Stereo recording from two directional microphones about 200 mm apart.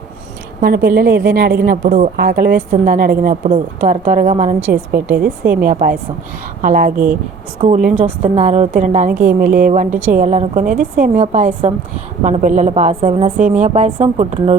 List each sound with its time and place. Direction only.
0.6 s a woman's voice: 50° right (ahead or behind)
4.6 s a woman's voice: 10° right (ahead or behind)
5.0 s a woman's voice: 45° right (ahead or behind)
7.9 s a woman's voice: 5° right (ahead or behind)
8.2 s a woman's voice: 35° right (ahead or behind)
13.3 s speech: 40° right (ahead or behind)